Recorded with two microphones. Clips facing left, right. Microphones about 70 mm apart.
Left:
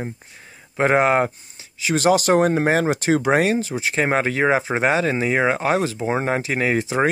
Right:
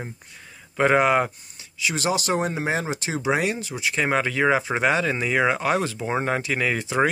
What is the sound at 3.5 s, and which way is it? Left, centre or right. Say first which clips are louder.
Speech: left 6 dB; left.